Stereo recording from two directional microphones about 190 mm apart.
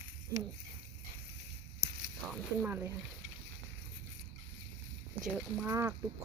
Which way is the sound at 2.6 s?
10° right (ahead or behind).